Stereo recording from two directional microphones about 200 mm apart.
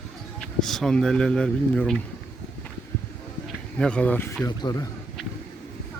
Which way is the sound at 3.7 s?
5° left (ahead or behind).